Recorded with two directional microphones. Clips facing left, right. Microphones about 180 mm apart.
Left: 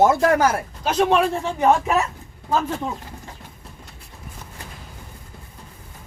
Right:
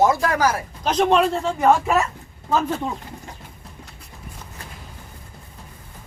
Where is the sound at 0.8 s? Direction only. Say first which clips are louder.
Right 1 dB; 5° left (ahead or behind).